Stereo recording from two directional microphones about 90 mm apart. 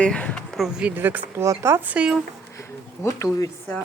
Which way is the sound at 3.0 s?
40° left (ahead or behind).